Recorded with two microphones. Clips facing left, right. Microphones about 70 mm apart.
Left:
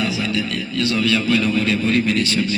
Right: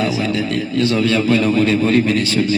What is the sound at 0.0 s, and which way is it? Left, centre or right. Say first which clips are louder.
A man's voice: right 3 dB; right.